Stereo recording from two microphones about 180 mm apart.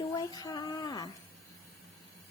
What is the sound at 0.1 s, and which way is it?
Speech, 20° left (ahead or behind).